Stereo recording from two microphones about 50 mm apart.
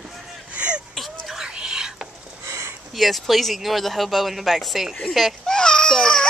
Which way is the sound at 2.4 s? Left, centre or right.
Right.